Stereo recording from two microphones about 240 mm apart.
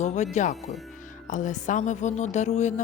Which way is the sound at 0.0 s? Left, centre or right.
Left.